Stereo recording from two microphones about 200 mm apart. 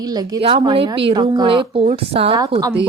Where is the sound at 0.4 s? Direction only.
25° right (ahead or behind).